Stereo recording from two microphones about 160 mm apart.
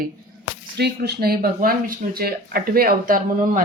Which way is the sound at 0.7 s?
90° right.